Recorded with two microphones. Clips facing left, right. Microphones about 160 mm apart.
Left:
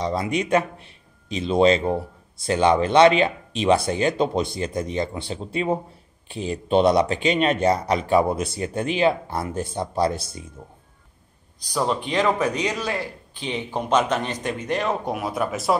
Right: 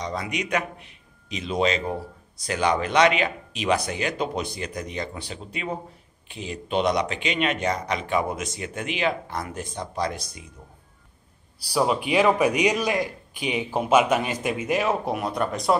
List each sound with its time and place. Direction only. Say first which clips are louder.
0.0 s a man's voice: left 6 dB; 30° left (ahead or behind)
11.7 s a man's voice: right 2 dB; 10° right (ahead or behind)